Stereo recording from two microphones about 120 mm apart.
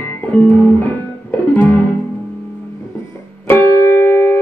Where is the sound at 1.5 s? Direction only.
15° left (ahead or behind).